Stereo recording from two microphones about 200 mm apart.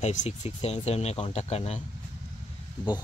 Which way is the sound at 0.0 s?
35° left (ahead or behind).